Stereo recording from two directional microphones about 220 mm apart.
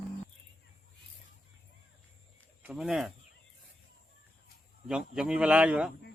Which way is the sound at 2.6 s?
Centre (ahead or behind).